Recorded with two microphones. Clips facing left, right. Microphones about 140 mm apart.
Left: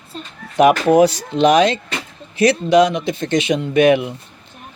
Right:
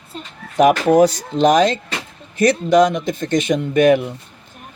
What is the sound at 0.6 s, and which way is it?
Speech, 45° right (ahead or behind).